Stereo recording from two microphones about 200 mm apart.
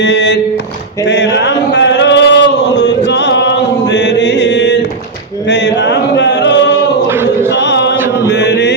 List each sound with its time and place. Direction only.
0.0 s speech: 60° left (ahead or behind)
1.0 s a sound: 60° left (ahead or behind)
7.1 s choir: 10° right (ahead or behind)
7.5 s chant: 60° left (ahead or behind)
7.9 s chant: 10° right (ahead or behind)
8.3 s mantra: 60° left (ahead or behind)